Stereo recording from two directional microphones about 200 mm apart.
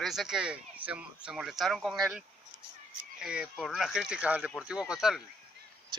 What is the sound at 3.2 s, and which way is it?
Speech, 5° right (ahead or behind).